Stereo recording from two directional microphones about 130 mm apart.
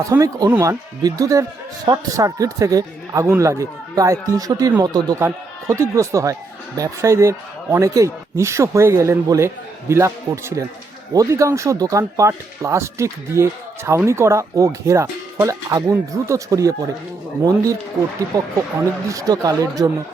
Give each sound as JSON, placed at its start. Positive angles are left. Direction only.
{"t": 0.0, "sound": "speech", "side_deg": -25}
{"t": 18.3, "sound": "speech", "side_deg": -30}